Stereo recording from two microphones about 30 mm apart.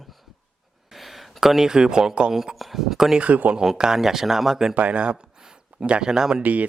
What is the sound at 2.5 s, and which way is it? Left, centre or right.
Speech, centre.